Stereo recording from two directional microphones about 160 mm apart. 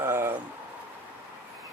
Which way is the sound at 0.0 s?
15° right (ahead or behind).